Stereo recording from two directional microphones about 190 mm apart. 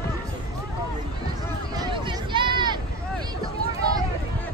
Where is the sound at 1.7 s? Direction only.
25° right (ahead or behind).